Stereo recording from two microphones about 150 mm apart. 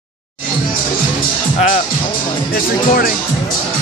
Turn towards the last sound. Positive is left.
turn(degrees=75)  # may be behind; listen again after turning